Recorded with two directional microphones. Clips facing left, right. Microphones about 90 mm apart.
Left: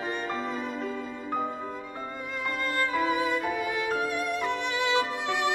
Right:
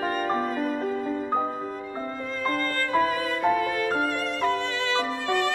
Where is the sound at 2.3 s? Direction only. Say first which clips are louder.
Right 2 dB; 15° left (ahead or behind).